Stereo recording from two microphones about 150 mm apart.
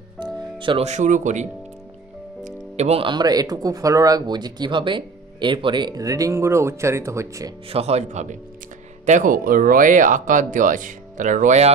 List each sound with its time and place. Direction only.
0.2 s music: 35° right (ahead or behind)
0.8 s speech: 55° right (ahead or behind); by 7.5 s 20° right (ahead or behind)
7.7 s speech: 45° right (ahead or behind)